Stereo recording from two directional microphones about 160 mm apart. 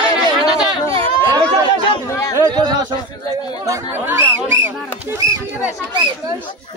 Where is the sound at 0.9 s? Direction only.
30° right (ahead or behind).